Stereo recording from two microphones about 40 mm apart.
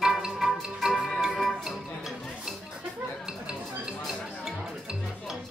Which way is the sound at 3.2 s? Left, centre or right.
Right.